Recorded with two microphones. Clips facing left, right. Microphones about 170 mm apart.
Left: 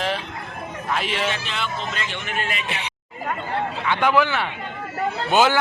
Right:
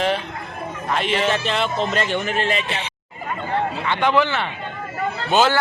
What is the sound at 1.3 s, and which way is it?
Speech, 35° right (ahead or behind).